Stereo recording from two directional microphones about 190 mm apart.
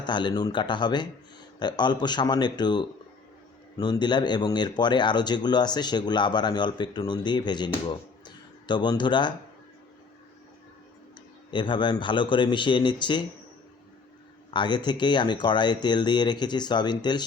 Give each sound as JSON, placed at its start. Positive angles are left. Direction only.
{"t": 0.0, "sound": "speech", "side_deg": 25}
{"t": 11.5, "sound": "speech", "side_deg": 25}
{"t": 14.5, "sound": "speech", "side_deg": 25}